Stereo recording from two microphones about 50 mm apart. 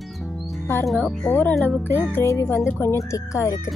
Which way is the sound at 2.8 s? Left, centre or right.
Left.